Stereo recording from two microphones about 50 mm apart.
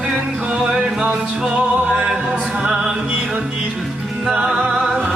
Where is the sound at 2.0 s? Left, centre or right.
Centre.